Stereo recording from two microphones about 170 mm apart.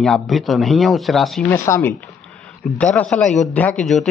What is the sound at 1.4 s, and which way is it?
A man's voice, 15° left (ahead or behind).